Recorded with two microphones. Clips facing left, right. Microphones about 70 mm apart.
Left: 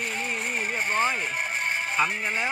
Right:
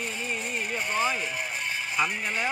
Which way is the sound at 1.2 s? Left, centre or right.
Left.